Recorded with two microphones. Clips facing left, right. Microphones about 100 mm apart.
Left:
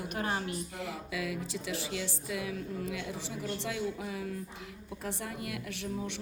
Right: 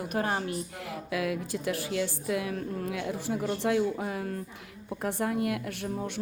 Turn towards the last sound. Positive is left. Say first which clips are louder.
# right 4 dB
turn(degrees=-45)  # may be behind; listen again after turning